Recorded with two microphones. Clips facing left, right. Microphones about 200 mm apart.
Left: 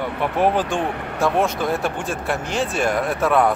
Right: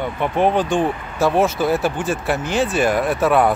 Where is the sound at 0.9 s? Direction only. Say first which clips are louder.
Left 5 dB; 65° left (ahead or behind).